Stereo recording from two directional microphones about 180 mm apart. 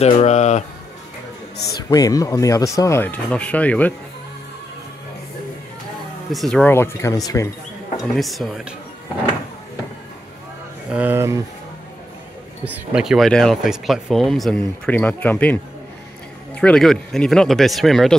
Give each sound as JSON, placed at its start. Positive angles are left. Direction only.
{"t": 0.0, "sound": "speech", "side_deg": 35}
{"t": 1.8, "sound": "speech", "side_deg": 20}
{"t": 6.3, "sound": "speech", "side_deg": 5}
{"t": 8.0, "sound": "speech", "side_deg": 0}
{"t": 10.9, "sound": "speech", "side_deg": -10}
{"t": 12.7, "sound": "speech", "side_deg": -5}